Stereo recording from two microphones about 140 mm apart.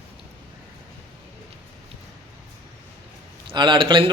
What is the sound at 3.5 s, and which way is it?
Speech, 35° right (ahead or behind).